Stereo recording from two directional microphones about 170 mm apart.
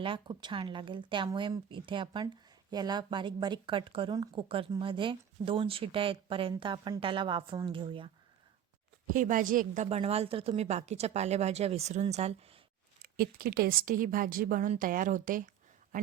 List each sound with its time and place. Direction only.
0.0 s speech: 30° right (ahead or behind)
9.1 s a woman's voice: 50° right (ahead or behind)
13.0 s speech: 60° right (ahead or behind)